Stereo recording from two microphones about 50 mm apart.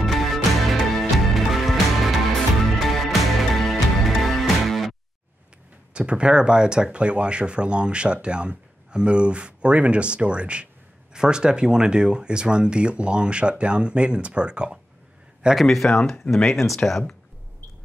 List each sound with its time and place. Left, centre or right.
0.0 s music: centre
5.9 s speech: right
15.6 s speech: centre